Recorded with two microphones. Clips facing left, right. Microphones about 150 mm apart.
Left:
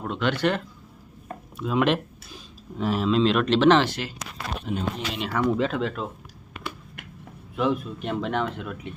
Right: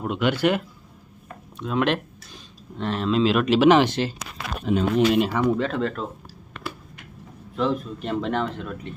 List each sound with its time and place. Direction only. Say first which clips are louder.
0.0 s speech: right 3 dB; 10° right (ahead or behind)
1.5 s speech: even; 5° left (ahead or behind)
3.8 s speech: right 6 dB; 25° right (ahead or behind)
4.7 s speech: right 10 dB; 90° right
5.3 s speech: right 2 dB; 15° right (ahead or behind)
5.5 s speech: right 1 dB; 5° left (ahead or behind)
7.5 s speech: even; 10° left (ahead or behind)